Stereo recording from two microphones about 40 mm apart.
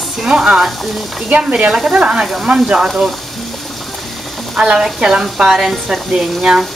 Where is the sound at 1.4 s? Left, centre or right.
Right.